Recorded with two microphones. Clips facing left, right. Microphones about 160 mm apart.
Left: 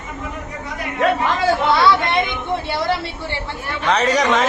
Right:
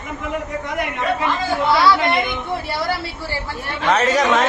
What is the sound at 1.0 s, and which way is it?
Speech, 75° left (ahead or behind).